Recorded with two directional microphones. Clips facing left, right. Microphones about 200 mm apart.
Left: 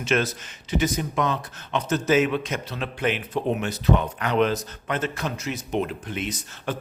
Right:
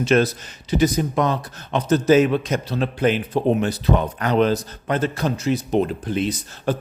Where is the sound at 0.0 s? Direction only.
35° right (ahead or behind).